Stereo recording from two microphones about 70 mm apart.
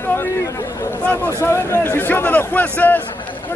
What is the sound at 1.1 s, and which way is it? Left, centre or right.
A man's voice, left.